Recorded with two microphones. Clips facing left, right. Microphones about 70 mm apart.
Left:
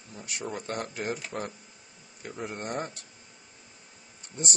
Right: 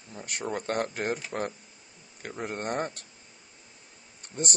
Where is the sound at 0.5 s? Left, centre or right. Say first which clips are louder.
Right 6 dB; right.